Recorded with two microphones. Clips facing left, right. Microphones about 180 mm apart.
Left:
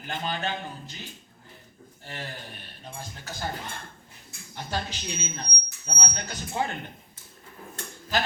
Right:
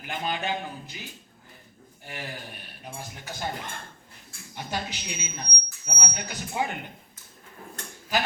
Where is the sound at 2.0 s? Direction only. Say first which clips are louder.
Right 1 dB; 15° right (ahead or behind).